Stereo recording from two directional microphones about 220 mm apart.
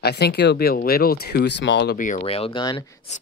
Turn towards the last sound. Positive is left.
turn(degrees=30)  # may be behind; listen again after turning